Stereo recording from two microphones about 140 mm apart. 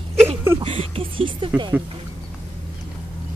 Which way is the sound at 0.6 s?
40° right (ahead or behind).